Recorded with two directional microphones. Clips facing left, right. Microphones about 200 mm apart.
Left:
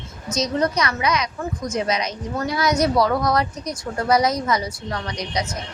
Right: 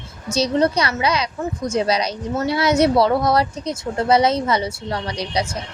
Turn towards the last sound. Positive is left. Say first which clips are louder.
# right 3 dB
turn(degrees=-30)  # may be behind; listen again after turning